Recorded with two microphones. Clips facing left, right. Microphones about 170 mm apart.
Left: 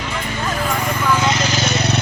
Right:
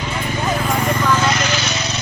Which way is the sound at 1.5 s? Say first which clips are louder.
Left 4 dB; 55° left (ahead or behind).